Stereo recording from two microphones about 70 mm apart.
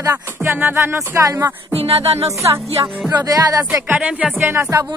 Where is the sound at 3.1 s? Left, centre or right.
Right.